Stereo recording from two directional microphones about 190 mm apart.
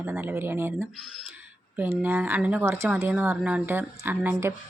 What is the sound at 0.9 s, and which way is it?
Speech, centre (ahead or behind).